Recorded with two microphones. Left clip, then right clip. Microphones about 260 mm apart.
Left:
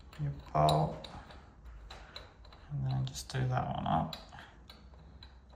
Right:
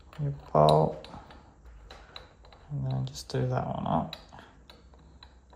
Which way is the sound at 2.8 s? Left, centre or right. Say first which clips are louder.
Right 3 dB; right.